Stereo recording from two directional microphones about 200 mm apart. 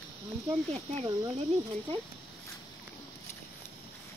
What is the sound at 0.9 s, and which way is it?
Speech, 25° right (ahead or behind).